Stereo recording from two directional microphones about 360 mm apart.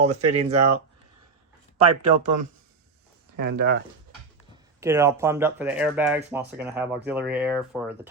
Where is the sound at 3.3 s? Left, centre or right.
Right.